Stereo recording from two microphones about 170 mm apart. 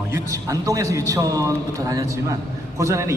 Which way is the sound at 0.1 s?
20° right (ahead or behind).